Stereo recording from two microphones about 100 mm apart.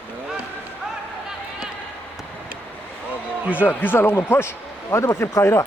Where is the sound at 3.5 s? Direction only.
20° left (ahead or behind).